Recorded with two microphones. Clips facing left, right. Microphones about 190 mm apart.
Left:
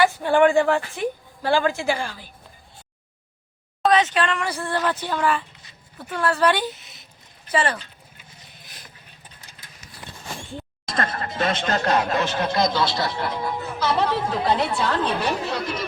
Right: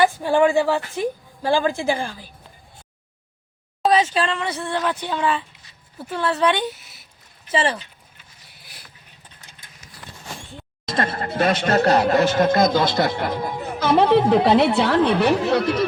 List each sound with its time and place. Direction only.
0.2 s a woman's voice: 10° right (ahead or behind)
3.8 s speech: 30° right (ahead or behind)
4.4 s speech: centre (ahead or behind)
4.9 s a woman's voice: 15° right (ahead or behind)
6.1 s speech: 5° right (ahead or behind)
7.5 s speech: 25° right (ahead or behind)
8.5 s a sound: 10° right (ahead or behind)
10.8 s speech: 25° right (ahead or behind)
11.3 s speech: 40° right (ahead or behind)
12.4 s speech: 50° right (ahead or behind); by 15.9 s 70° right (ahead or behind)